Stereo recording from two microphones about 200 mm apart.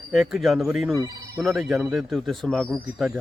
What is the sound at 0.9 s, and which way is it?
Speech, 15° right (ahead or behind).